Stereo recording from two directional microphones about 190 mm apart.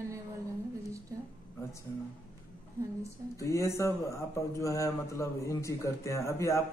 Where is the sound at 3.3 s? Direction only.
15° left (ahead or behind).